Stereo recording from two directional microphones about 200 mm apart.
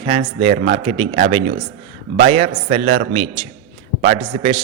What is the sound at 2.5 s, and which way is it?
Speech, 40° right (ahead or behind).